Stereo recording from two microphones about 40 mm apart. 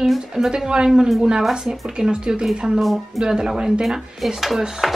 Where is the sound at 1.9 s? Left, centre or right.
Right.